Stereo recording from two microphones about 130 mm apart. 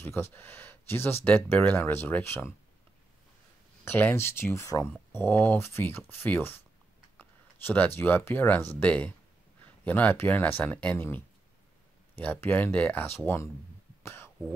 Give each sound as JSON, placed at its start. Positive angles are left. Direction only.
{"t": 0.0, "sound": "speech", "side_deg": 20}
{"t": 3.8, "sound": "speech", "side_deg": 15}
{"t": 14.0, "sound": "a sound", "side_deg": 20}